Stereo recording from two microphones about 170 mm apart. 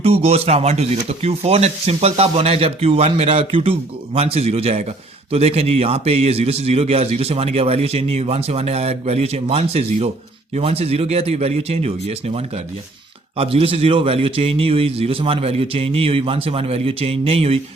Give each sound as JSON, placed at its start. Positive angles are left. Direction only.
{"t": 0.0, "sound": "speech", "side_deg": -35}